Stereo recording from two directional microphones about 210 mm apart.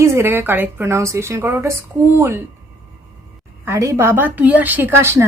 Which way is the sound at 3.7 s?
10° right (ahead or behind).